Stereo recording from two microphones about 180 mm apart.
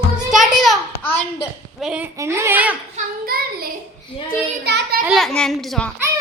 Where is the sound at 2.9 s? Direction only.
55° right (ahead or behind).